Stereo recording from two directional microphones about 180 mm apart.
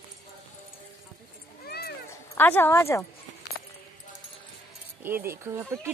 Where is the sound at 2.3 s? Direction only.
10° left (ahead or behind).